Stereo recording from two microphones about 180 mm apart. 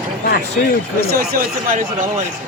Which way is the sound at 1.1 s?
55° right (ahead or behind).